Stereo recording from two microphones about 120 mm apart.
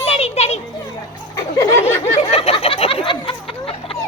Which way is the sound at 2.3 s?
55° left (ahead or behind).